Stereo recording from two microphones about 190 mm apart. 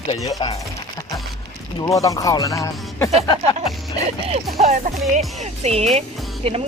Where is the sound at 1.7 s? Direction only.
20° left (ahead or behind).